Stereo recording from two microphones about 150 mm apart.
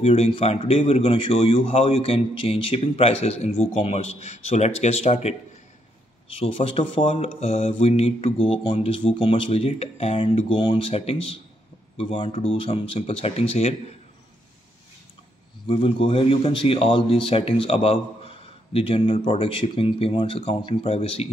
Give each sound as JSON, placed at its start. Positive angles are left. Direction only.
{"t": 0.0, "sound": "a man's voice", "side_deg": 45}
{"t": 6.4, "sound": "a man's voice", "side_deg": 45}
{"t": 10.9, "sound": "a man's voice", "side_deg": 45}
{"t": 15.7, "sound": "a man's voice", "side_deg": 35}